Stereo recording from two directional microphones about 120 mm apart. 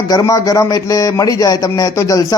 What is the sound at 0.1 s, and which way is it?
Speech, 30° left (ahead or behind).